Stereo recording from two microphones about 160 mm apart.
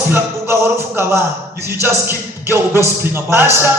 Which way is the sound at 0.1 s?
15° right (ahead or behind).